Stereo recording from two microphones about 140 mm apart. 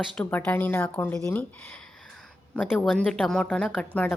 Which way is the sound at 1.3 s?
15° left (ahead or behind).